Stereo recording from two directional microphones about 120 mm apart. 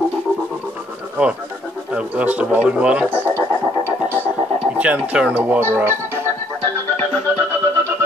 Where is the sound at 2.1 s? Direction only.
15° right (ahead or behind).